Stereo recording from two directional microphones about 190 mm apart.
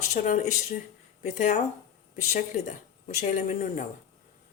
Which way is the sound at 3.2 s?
40° left (ahead or behind).